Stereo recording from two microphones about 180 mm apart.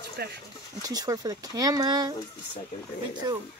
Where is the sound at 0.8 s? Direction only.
20° right (ahead or behind).